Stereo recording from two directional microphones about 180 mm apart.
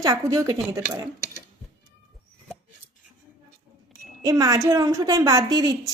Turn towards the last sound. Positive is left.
turn(degrees=-20)  # may be behind; listen again after turning